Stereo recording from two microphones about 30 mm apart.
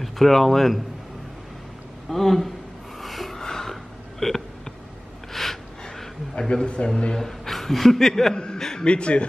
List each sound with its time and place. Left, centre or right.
0.0 s speech: centre
2.0 s speech: centre
3.0 s a sound: centre
3.3 s a sound: centre
4.2 s speech: centre
5.3 s a sound: centre
6.5 s a man's voice: left
7.2 s speech: centre
8.5 s chuckle: centre
8.8 s a man's voice: left